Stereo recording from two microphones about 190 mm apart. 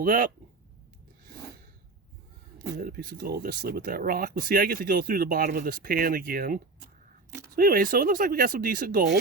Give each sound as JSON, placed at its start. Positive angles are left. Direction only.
{"t": 0.0, "sound": "speech", "side_deg": -45}
{"t": 2.6, "sound": "speech", "side_deg": -50}